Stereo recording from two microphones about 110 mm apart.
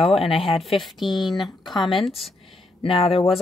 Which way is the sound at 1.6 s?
40° left (ahead or behind).